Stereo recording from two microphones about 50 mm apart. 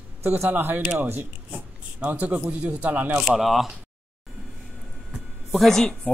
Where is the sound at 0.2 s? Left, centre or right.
Right.